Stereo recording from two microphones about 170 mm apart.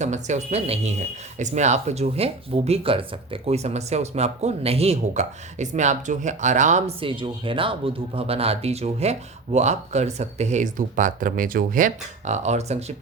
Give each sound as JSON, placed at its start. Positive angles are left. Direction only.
{"t": 0.0, "sound": "speech", "side_deg": -45}